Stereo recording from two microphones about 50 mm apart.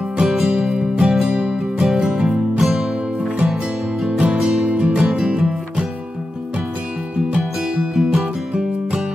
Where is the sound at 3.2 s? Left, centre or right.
Centre.